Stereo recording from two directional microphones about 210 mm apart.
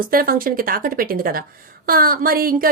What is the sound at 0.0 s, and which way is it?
Speech, 45° right (ahead or behind).